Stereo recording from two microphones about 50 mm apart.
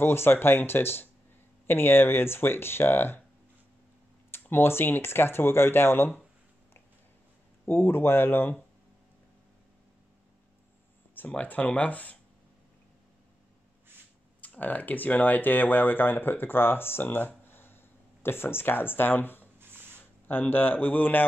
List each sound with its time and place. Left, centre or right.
0.0 s speech: left
4.4 s speech: left
7.6 s speech: left
11.1 s speech: left
14.4 s speech: left
17.5 s a sound: left
18.2 s a man's voice: left